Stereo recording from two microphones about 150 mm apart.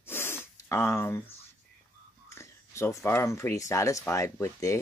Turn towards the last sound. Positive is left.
turn(degrees=20)  # may be behind; listen again after turning